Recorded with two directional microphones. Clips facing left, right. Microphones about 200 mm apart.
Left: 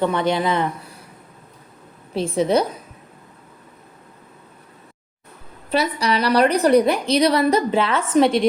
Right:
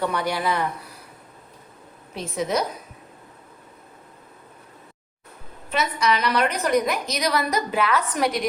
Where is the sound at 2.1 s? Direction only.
30° left (ahead or behind).